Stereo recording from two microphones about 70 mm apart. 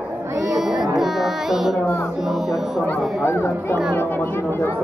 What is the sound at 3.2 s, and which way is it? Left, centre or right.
Speech, left.